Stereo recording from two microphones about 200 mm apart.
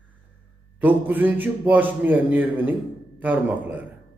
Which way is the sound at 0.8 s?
10° right (ahead or behind).